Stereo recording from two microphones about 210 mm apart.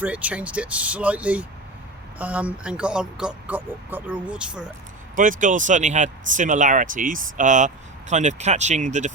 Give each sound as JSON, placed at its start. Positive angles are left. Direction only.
{"t": 0.0, "sound": "speech", "side_deg": -5}
{"t": 5.1, "sound": "speech", "side_deg": -40}